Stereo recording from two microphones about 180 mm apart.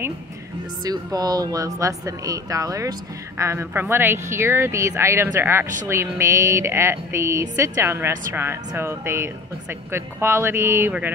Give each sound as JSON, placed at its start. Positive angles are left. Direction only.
{"t": 0.8, "sound": "speech", "side_deg": -20}